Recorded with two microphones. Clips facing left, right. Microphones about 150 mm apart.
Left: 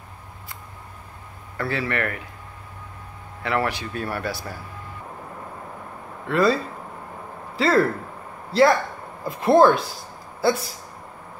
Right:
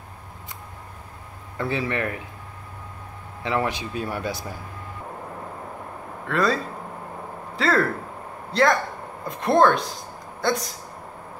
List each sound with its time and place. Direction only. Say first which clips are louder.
1.6 s speech: even; 15° right (ahead or behind)
3.4 s speech: left 1 dB; 15° right (ahead or behind)
6.2 s a man's voice: left 3 dB; centre (ahead or behind)